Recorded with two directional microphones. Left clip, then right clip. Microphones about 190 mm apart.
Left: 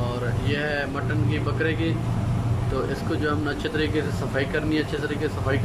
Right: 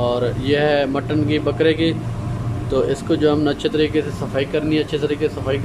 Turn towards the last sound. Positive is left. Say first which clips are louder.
# right 6 dB
turn(degrees=-15)  # may be behind; listen again after turning